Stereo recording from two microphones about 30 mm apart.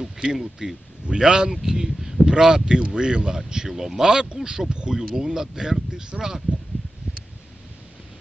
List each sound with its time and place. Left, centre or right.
0.3 s speech: centre
4.1 s speech: right
4.9 s speech: centre
6.5 s a sound: right